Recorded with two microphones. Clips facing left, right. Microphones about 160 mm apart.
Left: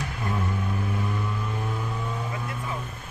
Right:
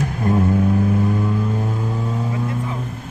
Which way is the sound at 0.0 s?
45° right (ahead or behind).